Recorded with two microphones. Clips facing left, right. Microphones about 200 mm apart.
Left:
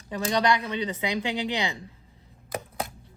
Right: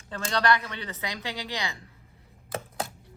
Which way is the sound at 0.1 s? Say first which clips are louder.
Left 2 dB; 15° left (ahead or behind).